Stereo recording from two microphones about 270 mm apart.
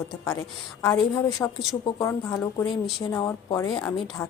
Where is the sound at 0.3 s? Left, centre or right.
Centre.